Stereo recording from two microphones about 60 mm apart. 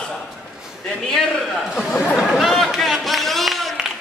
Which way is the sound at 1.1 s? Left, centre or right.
Centre.